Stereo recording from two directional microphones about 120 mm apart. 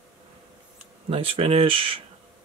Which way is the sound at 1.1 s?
55° right (ahead or behind).